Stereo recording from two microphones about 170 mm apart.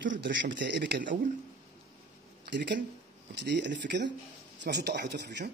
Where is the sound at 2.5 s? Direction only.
90° right.